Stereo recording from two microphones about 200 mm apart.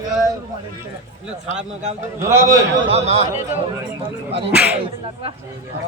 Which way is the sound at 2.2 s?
15° right (ahead or behind).